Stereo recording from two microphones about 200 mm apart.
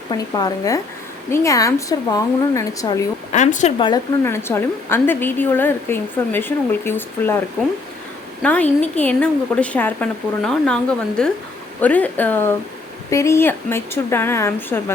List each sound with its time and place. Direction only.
0.1 s a woman's voice: 20° left (ahead or behind)
3.3 s speech: 35° left (ahead or behind)
3.8 s a woman's voice: 15° left (ahead or behind)